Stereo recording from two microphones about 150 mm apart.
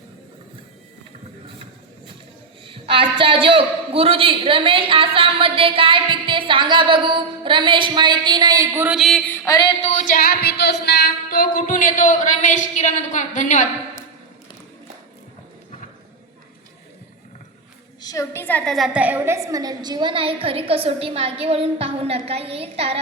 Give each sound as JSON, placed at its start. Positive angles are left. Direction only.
{"t": 2.6, "sound": "a man's voice", "side_deg": -35}
{"t": 9.0, "sound": "a sound", "side_deg": 5}
{"t": 9.5, "sound": "a sound", "side_deg": 30}
{"t": 9.8, "sound": "music", "side_deg": 55}
{"t": 18.0, "sound": "a woman's voice", "side_deg": 20}
{"t": 18.9, "sound": "a man's voice", "side_deg": -10}